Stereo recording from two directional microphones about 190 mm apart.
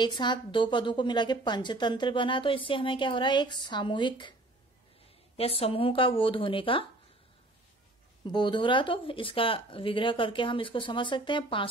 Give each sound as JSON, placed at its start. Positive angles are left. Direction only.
{"t": 0.0, "sound": "a woman's voice", "side_deg": 25}
{"t": 5.6, "sound": "a woman's voice", "side_deg": 30}
{"t": 8.3, "sound": "a woman's voice", "side_deg": 25}